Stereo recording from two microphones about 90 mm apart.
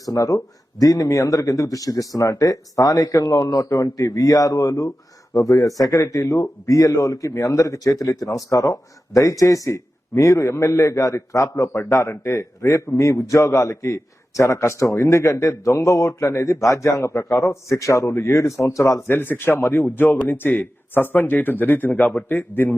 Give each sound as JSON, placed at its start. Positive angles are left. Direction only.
{"t": 0.0, "sound": "a man's voice", "side_deg": 40}
{"t": 19.1, "sound": "a man's voice", "side_deg": 25}